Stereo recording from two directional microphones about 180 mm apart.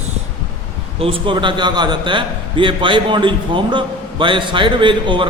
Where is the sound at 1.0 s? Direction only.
30° right (ahead or behind).